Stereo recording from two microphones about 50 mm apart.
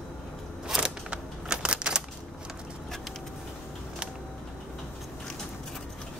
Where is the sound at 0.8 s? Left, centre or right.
Centre.